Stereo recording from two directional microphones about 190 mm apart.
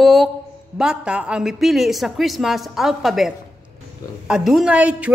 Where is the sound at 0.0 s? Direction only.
Centre (ahead or behind).